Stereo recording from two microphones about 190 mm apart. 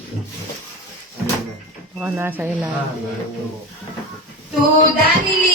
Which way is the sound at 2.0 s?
10° right (ahead or behind).